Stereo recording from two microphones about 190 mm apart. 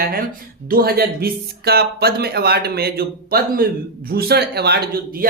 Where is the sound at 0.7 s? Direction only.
55° right (ahead or behind).